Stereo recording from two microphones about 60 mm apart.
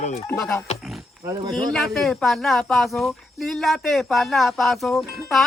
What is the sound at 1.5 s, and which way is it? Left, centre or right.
Speech, centre.